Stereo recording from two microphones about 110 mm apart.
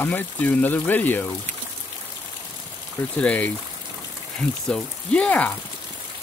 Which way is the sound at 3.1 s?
15° left (ahead or behind).